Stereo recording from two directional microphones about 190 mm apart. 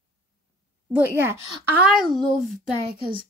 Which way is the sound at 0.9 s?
10° right (ahead or behind).